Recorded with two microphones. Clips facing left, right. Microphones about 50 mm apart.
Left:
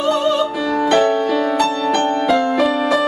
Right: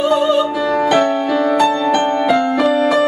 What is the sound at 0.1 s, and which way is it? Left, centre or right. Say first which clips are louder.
Music: right 3 dB; centre.